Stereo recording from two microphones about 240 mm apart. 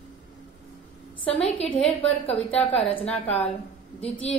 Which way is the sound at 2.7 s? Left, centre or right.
Left.